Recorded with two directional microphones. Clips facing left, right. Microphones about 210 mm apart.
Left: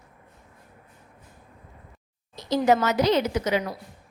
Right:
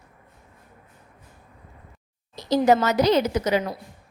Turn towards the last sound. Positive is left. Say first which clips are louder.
# right 2 dB
turn(degrees=-40)  # may be behind; listen again after turning